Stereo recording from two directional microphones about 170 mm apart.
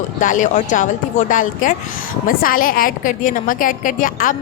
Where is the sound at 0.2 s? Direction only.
50° left (ahead or behind).